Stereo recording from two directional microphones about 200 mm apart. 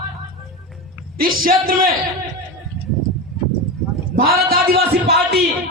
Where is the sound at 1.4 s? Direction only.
45° right (ahead or behind).